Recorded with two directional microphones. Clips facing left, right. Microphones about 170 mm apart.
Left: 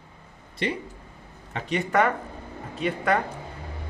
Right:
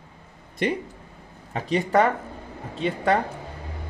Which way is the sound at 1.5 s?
35° right (ahead or behind).